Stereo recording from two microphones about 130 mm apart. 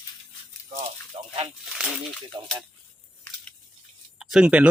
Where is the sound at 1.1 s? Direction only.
45° right (ahead or behind).